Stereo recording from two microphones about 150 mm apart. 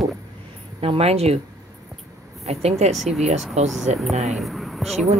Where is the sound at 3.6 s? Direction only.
50° right (ahead or behind).